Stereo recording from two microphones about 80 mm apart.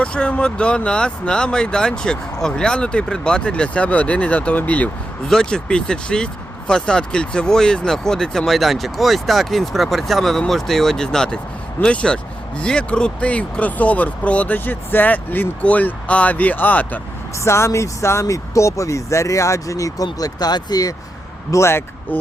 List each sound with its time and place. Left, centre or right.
0.0 s speech: centre
17.4 s speech: left
21.5 s speech: left